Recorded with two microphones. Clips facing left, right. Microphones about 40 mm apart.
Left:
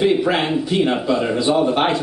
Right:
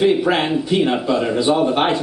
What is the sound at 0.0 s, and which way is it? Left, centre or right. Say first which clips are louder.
Speech: right 1 dB; centre.